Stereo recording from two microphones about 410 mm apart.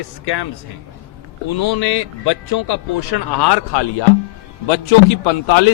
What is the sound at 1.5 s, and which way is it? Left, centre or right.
A man's voice, left.